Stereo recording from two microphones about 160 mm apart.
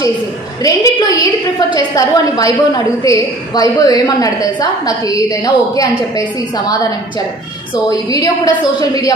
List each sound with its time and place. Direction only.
0.6 s a woman's voice: 20° left (ahead or behind)
7.9 s a woman's voice: 20° left (ahead or behind)